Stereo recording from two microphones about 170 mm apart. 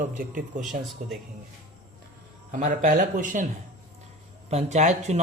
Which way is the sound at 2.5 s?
45° right (ahead or behind).